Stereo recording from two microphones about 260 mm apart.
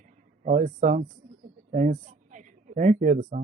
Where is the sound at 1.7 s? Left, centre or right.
Right.